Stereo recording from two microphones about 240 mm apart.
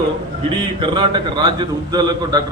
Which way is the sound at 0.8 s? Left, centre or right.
Centre.